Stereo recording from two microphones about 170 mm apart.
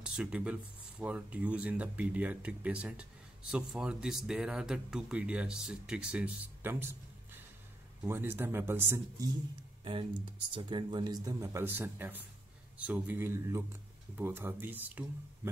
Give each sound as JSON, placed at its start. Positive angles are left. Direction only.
{"t": 0.0, "sound": "speech", "side_deg": -5}
{"t": 8.0, "sound": "speech", "side_deg": -10}
{"t": 10.5, "sound": "speech", "side_deg": -25}